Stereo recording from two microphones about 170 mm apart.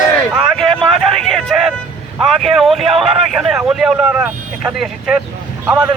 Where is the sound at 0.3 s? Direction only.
Centre (ahead or behind).